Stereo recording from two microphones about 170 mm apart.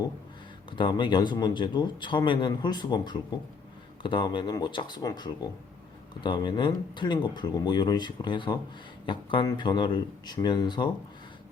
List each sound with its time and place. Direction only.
0.8 s speech: 25° left (ahead or behind)